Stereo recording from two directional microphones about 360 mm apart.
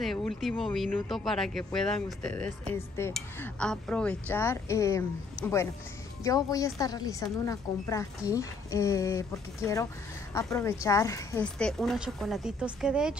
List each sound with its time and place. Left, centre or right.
0.0 s speech: centre
6.2 s a woman's voice: centre